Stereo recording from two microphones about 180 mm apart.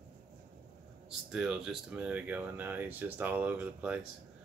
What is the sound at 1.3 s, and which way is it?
Speech, 5° right (ahead or behind).